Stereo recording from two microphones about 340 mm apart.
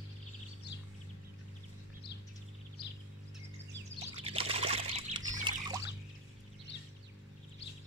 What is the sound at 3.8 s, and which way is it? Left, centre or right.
Pour, centre.